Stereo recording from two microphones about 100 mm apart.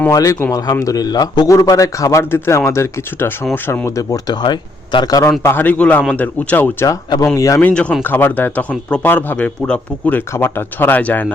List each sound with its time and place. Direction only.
0.1 s a man's voice: 35° left (ahead or behind)
3.8 s a man's voice: 35° left (ahead or behind); by 5.2 s 50° left (ahead or behind)
5.4 s speech: 20° left (ahead or behind)
7.3 s a man's voice: 35° left (ahead or behind)
7.6 s speech: 10° left (ahead or behind)